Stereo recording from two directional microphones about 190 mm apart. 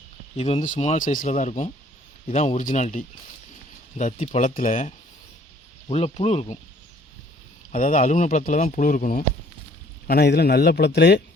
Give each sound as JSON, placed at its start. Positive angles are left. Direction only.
{"t": 0.3, "sound": "speech", "side_deg": 35}
{"t": 7.7, "sound": "speech", "side_deg": 40}
{"t": 10.1, "sound": "a man's voice", "side_deg": 55}